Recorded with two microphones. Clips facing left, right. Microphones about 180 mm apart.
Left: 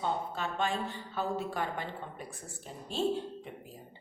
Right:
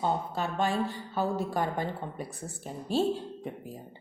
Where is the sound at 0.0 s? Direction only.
40° right (ahead or behind).